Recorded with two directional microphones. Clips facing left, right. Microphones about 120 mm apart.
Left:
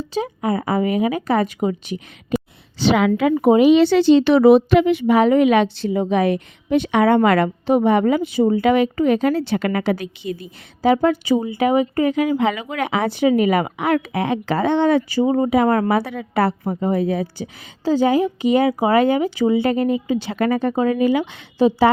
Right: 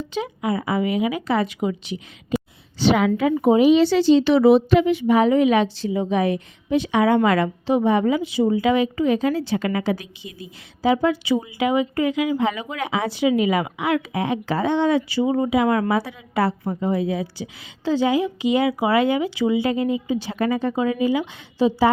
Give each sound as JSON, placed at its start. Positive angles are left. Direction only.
{"t": 0.0, "sound": "a woman's voice", "side_deg": 40}
{"t": 2.7, "sound": "a woman's voice", "side_deg": 90}
{"t": 3.4, "sound": "speech", "side_deg": 70}
{"t": 10.8, "sound": "a woman's voice", "side_deg": 55}
{"t": 12.4, "sound": "speech", "side_deg": 90}
{"t": 12.7, "sound": "speech", "side_deg": 65}
{"t": 15.2, "sound": "speech", "side_deg": 40}
{"t": 15.4, "sound": "a woman's voice", "side_deg": 50}